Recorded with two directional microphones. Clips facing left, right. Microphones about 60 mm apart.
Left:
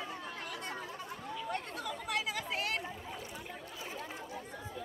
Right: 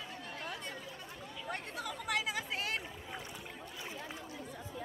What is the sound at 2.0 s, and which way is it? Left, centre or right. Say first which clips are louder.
Chatter: right 1 dB; right.